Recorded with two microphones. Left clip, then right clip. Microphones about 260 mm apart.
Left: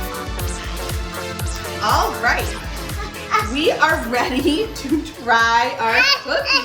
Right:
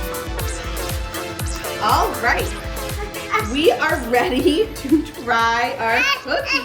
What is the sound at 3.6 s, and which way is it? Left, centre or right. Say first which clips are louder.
A woman's voice: right 1 dB; centre.